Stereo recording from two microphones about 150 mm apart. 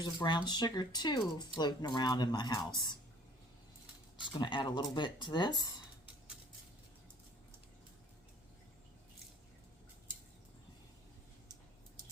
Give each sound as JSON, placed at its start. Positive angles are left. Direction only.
{"t": 0.0, "sound": "speech", "side_deg": 30}
{"t": 4.3, "sound": "speech", "side_deg": 30}